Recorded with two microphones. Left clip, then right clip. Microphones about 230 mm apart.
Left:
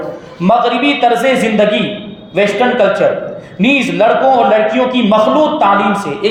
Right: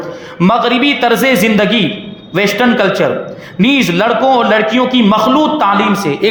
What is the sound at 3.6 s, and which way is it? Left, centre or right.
A man's voice, right.